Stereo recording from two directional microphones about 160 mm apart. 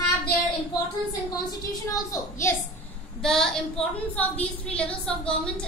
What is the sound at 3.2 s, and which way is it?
A woman's voice, 5° left (ahead or behind).